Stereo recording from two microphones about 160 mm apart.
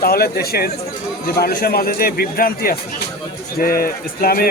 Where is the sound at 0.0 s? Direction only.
70° left (ahead or behind).